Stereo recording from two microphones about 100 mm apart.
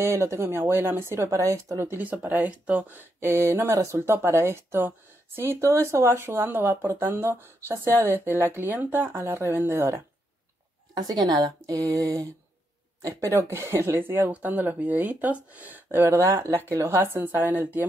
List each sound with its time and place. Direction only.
0.0 s speech: 30° right (ahead or behind)
2.0 s speech: 15° right (ahead or behind)
11.0 s a woman's voice: 40° right (ahead or behind); by 17.8 s 20° right (ahead or behind)